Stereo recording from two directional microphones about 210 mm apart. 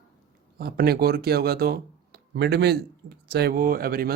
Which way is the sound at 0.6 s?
50° right (ahead or behind).